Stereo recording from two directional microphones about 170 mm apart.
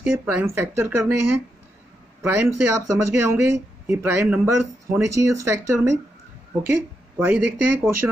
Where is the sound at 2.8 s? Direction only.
15° right (ahead or behind).